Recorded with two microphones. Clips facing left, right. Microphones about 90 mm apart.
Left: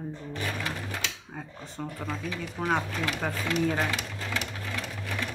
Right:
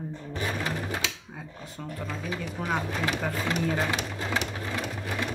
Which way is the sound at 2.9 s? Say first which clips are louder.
Right 2 dB; 30° right (ahead or behind).